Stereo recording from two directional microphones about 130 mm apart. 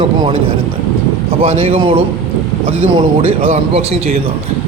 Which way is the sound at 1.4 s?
50° right (ahead or behind).